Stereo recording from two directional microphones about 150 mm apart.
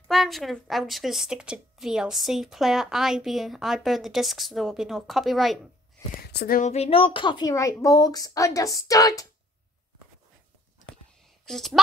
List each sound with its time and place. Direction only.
0.1 s a woman's voice: centre (ahead or behind)
6.3 s speech: 70° left (ahead or behind)
6.7 s a woman's voice: 40° left (ahead or behind); by 9.3 s 25° left (ahead or behind)
11.4 s a woman's voice: centre (ahead or behind)